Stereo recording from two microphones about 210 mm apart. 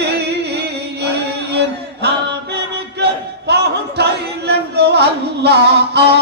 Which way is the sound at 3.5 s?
50° right (ahead or behind).